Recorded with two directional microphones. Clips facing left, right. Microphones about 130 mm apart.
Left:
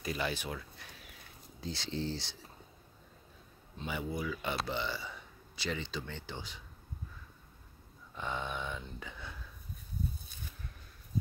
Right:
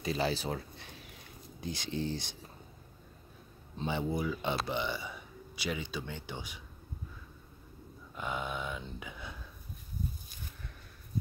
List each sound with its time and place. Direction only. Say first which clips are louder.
0.0 s speech: right 4 dB; 30° right (ahead or behind)
1.6 s speech: right 2 dB; 15° right (ahead or behind)
3.7 s speech: right 4 dB; 30° right (ahead or behind); by 6.6 s 15° right (ahead or behind)
8.1 s speech: right 1 dB; 10° right (ahead or behind)